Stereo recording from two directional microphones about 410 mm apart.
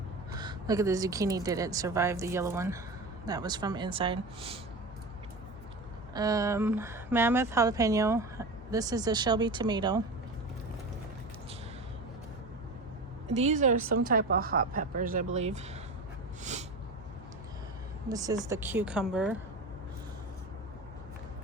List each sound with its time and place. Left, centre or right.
0.3 s speech: centre
6.1 s speech: centre
13.2 s speech: centre
16.4 s a sound: centre
18.1 s a woman's voice: centre